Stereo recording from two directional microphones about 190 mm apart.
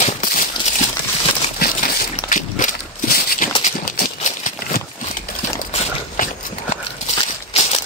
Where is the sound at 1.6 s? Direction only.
50° left (ahead or behind).